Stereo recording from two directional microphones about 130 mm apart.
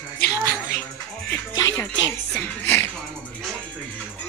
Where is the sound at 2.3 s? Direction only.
15° left (ahead or behind).